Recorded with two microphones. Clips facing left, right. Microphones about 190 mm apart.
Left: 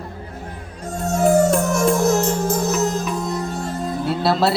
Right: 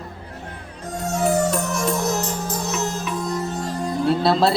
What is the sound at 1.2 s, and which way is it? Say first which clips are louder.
Music: left 5 dB; 50° left (ahead or behind).